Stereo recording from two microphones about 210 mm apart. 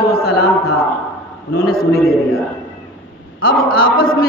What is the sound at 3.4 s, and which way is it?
Speech, 45° left (ahead or behind).